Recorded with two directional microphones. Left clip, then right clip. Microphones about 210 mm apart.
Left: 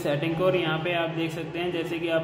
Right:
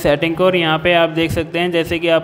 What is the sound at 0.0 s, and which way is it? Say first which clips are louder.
A man's voice: right 11 dB; 40° right (ahead or behind).